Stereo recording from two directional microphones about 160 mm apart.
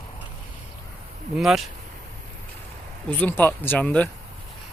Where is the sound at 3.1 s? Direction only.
10° left (ahead or behind).